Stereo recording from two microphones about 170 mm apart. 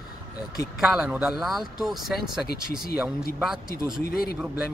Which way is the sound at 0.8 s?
5° right (ahead or behind).